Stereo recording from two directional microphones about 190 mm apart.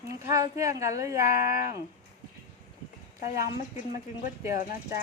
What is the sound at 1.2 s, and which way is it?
Speech, 50° left (ahead or behind).